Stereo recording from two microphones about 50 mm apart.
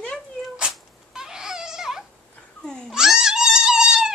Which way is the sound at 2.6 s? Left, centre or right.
Centre.